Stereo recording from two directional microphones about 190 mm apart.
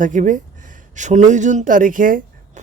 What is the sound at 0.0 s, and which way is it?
Speech, 40° right (ahead or behind).